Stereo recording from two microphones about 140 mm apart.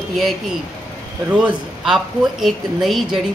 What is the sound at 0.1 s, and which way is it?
A man's voice, centre (ahead or behind).